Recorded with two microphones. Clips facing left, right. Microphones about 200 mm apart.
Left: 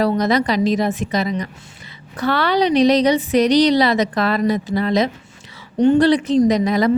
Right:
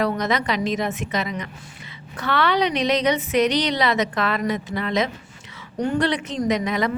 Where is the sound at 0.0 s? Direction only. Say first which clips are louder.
Left 6 dB; 35° left (ahead or behind).